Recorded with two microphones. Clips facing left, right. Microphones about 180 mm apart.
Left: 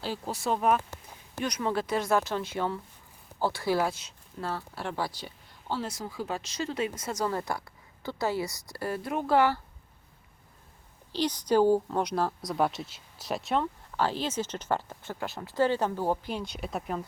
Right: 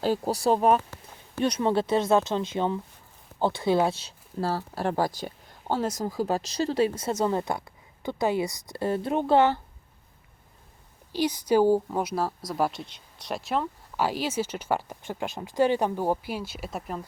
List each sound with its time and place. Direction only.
0.0 s speech: 40° right (ahead or behind); by 9.6 s 25° right (ahead or behind)
11.1 s speech: 10° right (ahead or behind)